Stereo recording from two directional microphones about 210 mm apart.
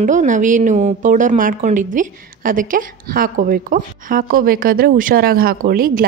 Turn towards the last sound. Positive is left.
turn(degrees=-45)  # may be behind; listen again after turning